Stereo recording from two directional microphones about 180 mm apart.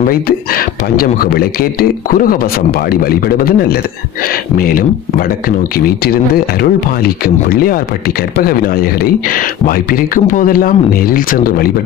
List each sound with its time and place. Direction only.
0.0 s speech: 55° left (ahead or behind)